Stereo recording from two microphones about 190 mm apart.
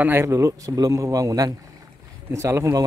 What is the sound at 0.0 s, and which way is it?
Speech, 10° right (ahead or behind).